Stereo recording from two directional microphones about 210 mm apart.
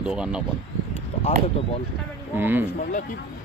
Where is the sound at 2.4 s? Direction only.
10° right (ahead or behind).